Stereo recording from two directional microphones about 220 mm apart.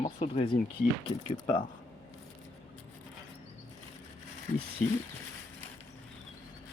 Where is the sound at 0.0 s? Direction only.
30° left (ahead or behind).